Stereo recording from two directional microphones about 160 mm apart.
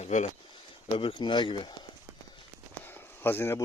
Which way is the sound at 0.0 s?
50° left (ahead or behind).